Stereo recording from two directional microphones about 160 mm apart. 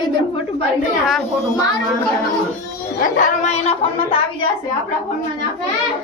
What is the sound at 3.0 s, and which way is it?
Speech, 50° left (ahead or behind).